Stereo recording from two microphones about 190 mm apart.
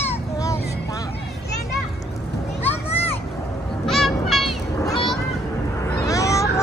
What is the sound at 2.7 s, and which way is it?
Children playing, 35° left (ahead or behind).